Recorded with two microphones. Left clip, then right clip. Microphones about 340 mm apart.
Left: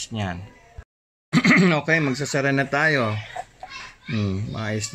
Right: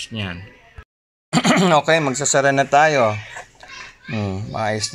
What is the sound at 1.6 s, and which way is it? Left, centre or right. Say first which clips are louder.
Speech: right 5 dB; right.